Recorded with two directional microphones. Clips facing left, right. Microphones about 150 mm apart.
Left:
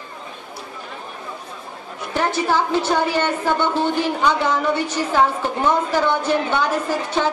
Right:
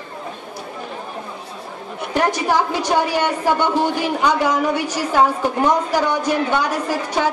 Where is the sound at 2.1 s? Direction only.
15° right (ahead or behind).